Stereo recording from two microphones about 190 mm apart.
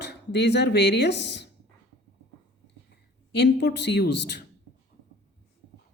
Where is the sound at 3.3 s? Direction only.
65° left (ahead or behind).